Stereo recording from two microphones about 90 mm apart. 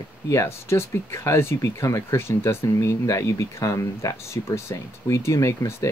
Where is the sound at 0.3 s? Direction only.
30° left (ahead or behind).